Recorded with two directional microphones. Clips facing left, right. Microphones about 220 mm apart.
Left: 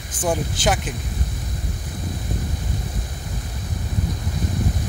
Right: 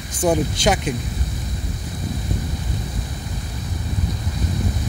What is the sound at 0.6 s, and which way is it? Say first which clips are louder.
Speech: right 3 dB; 5° left (ahead or behind).